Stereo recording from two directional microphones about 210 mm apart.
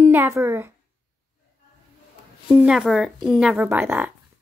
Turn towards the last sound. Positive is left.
turn(degrees=-10)  # may be behind; listen again after turning